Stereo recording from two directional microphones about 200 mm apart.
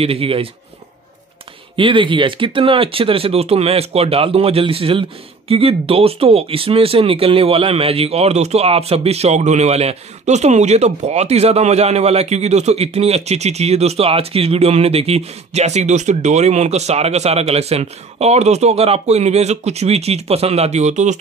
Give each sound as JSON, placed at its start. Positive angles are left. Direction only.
{"t": 0.0, "sound": "speech", "side_deg": -30}
{"t": 1.8, "sound": "speech", "side_deg": -25}